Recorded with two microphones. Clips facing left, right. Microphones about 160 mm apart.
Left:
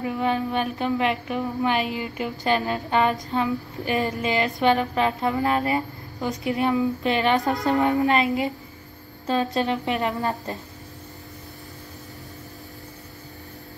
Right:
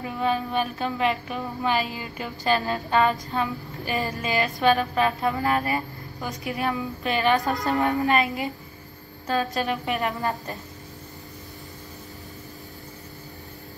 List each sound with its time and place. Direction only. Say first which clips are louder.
0.0 s a woman's voice: left 2 dB; 20° left (ahead or behind)